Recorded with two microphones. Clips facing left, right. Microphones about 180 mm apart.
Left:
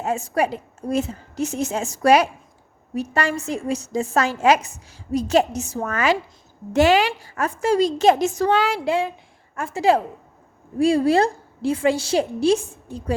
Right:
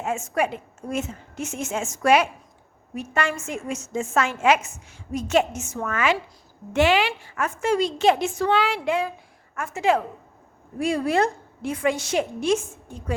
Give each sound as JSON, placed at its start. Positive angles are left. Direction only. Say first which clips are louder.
{"t": 0.0, "sound": "a woman's voice", "louder": "left 3 dB", "side_deg": 35}